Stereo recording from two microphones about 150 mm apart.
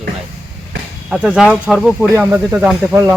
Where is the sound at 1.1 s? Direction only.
Centre (ahead or behind).